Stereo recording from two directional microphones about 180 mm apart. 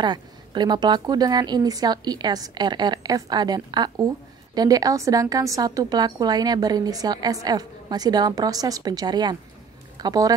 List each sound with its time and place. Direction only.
0.0 s a woman's voice: 25° right (ahead or behind)